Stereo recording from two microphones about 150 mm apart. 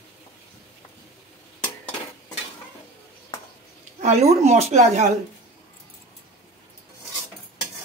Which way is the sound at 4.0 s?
50° right (ahead or behind).